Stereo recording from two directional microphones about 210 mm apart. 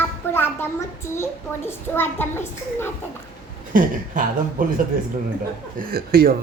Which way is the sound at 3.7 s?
40° right (ahead or behind).